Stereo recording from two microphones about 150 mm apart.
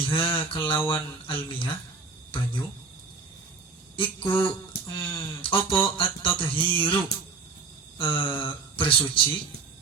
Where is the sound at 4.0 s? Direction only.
35° left (ahead or behind).